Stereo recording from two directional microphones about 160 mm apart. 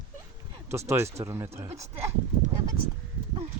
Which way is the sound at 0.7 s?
15° right (ahead or behind).